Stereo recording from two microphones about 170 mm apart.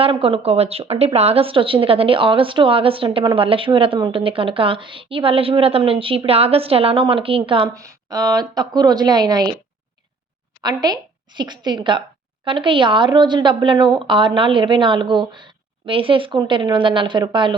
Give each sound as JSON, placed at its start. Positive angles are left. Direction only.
{"t": 0.0, "sound": "a woman's voice", "side_deg": -35}
{"t": 7.7, "sound": "a woman's voice", "side_deg": -20}
{"t": 10.6, "sound": "a woman's voice", "side_deg": -25}